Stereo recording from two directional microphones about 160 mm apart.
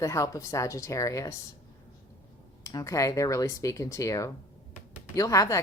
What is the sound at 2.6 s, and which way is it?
Speech, 20° left (ahead or behind).